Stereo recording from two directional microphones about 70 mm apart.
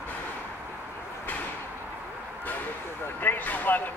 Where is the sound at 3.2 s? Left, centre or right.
Left.